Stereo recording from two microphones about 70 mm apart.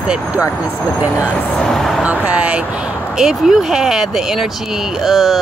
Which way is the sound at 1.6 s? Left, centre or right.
Centre.